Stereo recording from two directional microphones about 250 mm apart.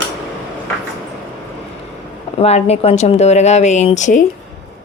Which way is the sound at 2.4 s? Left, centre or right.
Left.